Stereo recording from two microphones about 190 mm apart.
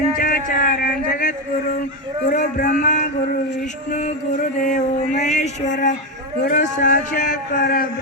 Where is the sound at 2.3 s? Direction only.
45° left (ahead or behind).